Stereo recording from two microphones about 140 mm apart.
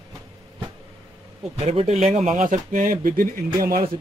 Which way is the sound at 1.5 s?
50° right (ahead or behind).